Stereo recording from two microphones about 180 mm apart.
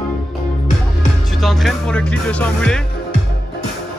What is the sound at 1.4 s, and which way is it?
Music, centre (ahead or behind).